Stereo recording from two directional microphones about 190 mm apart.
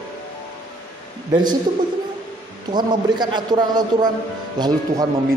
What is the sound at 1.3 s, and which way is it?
Speech, 20° right (ahead or behind).